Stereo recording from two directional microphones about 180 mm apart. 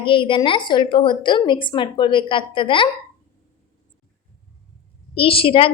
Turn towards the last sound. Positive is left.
turn(degrees=30)  # may be behind; listen again after turning